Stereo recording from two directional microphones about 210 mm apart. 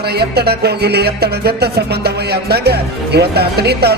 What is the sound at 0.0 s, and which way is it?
Music, 50° right (ahead or behind).